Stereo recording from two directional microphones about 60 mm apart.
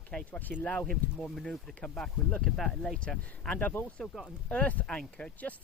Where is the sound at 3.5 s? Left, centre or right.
Left.